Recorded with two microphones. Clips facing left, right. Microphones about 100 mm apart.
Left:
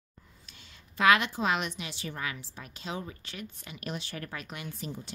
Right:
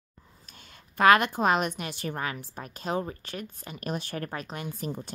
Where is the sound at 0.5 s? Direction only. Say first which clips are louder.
Right 6 dB; 45° right (ahead or behind).